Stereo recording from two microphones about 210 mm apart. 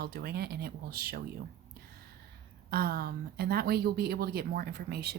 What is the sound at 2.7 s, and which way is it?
Speech, 45° right (ahead or behind).